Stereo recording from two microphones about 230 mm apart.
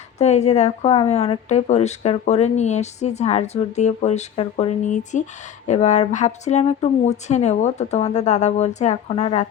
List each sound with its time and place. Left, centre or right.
0.2 s speech: left